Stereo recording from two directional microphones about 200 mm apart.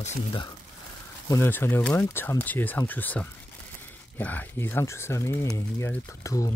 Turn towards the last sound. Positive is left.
turn(degrees=15)  # may be behind; listen again after turning